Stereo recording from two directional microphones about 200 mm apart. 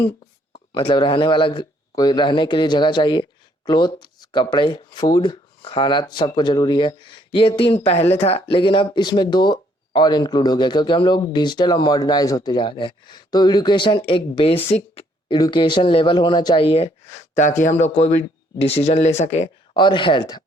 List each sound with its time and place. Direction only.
0.5 s speech: 25° left (ahead or behind)